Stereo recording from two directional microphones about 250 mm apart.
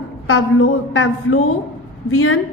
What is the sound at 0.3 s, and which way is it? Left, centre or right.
A woman's voice, left.